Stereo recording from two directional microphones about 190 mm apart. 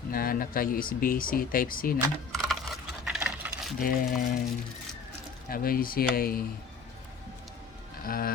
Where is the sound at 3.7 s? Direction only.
45° left (ahead or behind).